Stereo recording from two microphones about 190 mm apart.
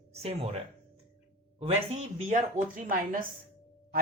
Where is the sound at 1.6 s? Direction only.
35° right (ahead or behind).